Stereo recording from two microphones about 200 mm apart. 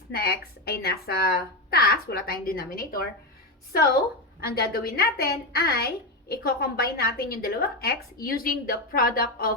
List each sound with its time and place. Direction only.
0.1 s a woman's voice: 50° left (ahead or behind)
4.4 s a woman's voice: 50° left (ahead or behind)